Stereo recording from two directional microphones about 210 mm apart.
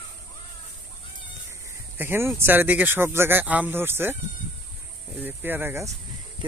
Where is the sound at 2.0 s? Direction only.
10° right (ahead or behind).